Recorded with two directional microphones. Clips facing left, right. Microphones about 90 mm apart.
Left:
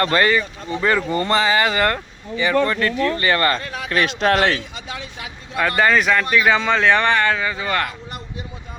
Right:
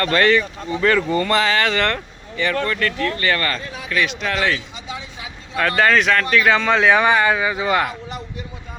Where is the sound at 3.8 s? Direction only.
40° left (ahead or behind).